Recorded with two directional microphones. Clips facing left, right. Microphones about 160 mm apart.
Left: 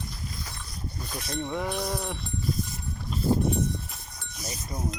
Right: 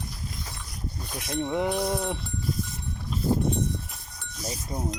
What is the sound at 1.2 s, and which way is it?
Speech, 15° right (ahead or behind).